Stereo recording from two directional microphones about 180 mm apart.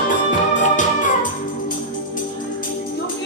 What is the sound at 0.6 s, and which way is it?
Music, 45° left (ahead or behind).